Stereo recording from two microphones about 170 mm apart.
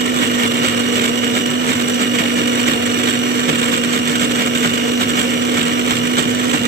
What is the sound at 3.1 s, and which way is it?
Vehicle, 65° right (ahead or behind).